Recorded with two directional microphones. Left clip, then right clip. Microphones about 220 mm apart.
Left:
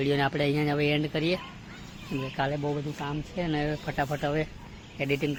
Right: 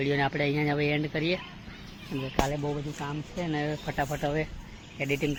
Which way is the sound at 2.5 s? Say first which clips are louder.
Left 1 dB; 5° left (ahead or behind).